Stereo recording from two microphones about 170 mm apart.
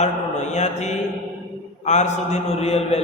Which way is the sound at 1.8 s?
45° left (ahead or behind).